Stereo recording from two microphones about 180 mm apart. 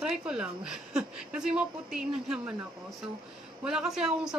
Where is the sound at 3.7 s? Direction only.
5° right (ahead or behind).